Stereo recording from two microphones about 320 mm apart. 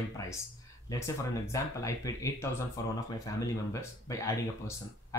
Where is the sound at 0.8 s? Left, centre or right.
Centre.